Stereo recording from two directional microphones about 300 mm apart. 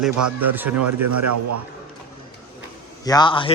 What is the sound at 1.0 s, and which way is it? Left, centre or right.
Speech, right.